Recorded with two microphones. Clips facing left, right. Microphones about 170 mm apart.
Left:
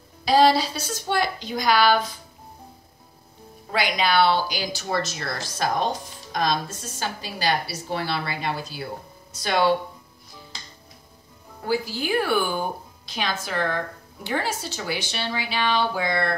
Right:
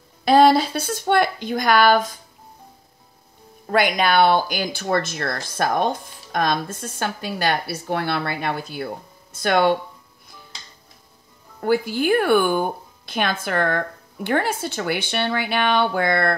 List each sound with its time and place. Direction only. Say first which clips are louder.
0.2 s a woman's voice: right 4 dB; 55° right (ahead or behind)
3.6 s speech: right 5 dB; 50° right (ahead or behind)
11.6 s speech: right 6 dB; 55° right (ahead or behind)